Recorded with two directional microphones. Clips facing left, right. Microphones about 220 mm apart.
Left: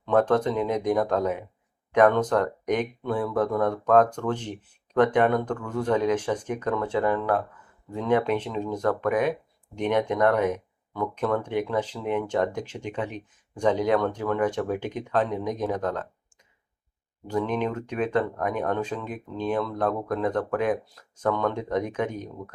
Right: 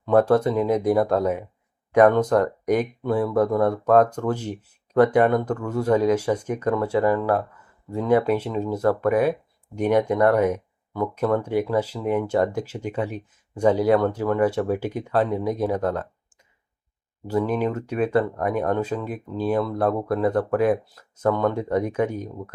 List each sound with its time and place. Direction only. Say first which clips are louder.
0.0 s speech: right 4 dB; 10° right (ahead or behind)
17.2 s speech: right 3 dB; 5° right (ahead or behind)